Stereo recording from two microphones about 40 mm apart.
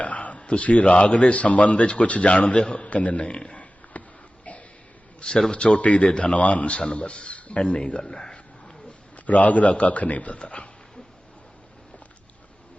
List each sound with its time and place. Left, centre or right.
0.0 s speech: left
2.6 s speech: centre
2.8 s a sound: left
5.6 s speech: left
7.6 s speech: centre
7.9 s a sound: centre
9.1 s speech: left